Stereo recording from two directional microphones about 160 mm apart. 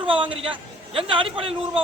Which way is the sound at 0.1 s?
35° right (ahead or behind).